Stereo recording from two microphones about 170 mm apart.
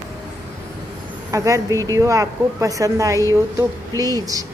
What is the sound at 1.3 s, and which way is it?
A woman's voice, 20° right (ahead or behind).